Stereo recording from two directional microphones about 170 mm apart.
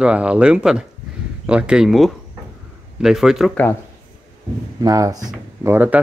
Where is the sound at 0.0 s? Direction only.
5° right (ahead or behind).